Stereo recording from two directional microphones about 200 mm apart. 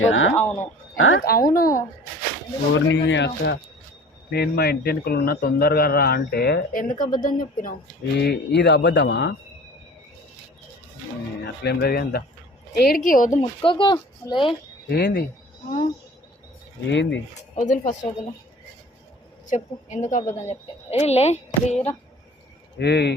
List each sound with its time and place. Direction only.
0.0 s speech: 75° left (ahead or behind)
0.3 s speech: 10° left (ahead or behind)
0.9 s speech: 90° left
1.2 s a man's voice: 45° left (ahead or behind)
2.7 s a man's voice: 65° left (ahead or behind); by 7.8 s 40° left (ahead or behind)
8.1 s a man's voice: 55° left (ahead or behind)
11.4 s a man's voice: 55° left (ahead or behind)
13.4 s speech: 25° left (ahead or behind)
14.8 s a man's voice: 55° left (ahead or behind)
16.9 s a man's voice: 65° left (ahead or behind)
17.5 s speech: 40° left (ahead or behind)
19.5 s a woman's voice: 35° left (ahead or behind)
22.8 s a man's voice: 55° left (ahead or behind)